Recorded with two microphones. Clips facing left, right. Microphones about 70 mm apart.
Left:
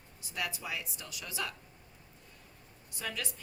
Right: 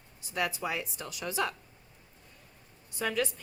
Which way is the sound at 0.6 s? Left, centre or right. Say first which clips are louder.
Right 6 dB; right.